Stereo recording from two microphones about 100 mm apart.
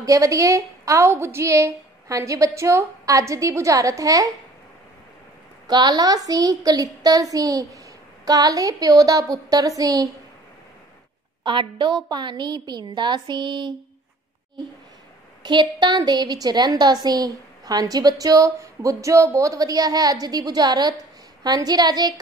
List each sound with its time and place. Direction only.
0.0 s a woman's voice: 35° right (ahead or behind)
5.7 s a woman's voice: 45° right (ahead or behind)
11.4 s a woman's voice: 50° right (ahead or behind)
15.4 s a woman's voice: 50° right (ahead or behind)